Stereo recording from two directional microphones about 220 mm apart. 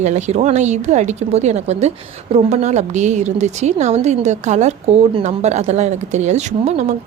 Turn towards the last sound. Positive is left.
turn(degrees=-30)  # may be behind; listen again after turning